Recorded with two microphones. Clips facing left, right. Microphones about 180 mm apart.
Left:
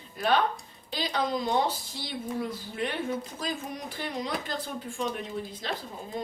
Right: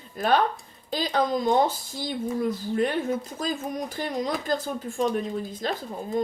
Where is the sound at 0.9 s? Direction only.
45° right (ahead or behind).